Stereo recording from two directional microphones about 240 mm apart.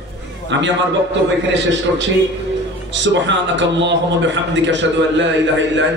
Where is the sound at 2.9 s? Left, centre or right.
Right.